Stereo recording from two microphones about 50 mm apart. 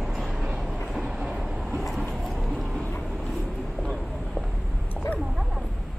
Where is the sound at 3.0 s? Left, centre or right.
Centre.